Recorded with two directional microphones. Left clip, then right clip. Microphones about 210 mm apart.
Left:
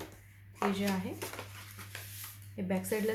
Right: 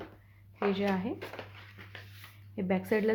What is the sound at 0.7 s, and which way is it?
Speech, 40° right (ahead or behind).